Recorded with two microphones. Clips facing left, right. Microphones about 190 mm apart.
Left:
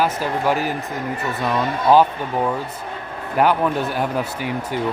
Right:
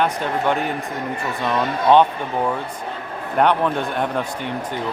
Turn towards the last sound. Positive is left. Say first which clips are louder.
# left 1 dB
turn(degrees=5)  # may be behind; listen again after turning